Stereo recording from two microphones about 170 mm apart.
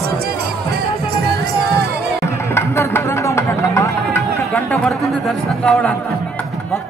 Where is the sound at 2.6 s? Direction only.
15° left (ahead or behind).